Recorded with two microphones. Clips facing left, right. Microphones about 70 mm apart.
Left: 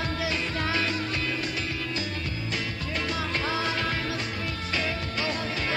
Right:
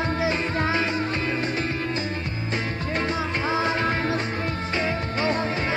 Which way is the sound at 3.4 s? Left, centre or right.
Right.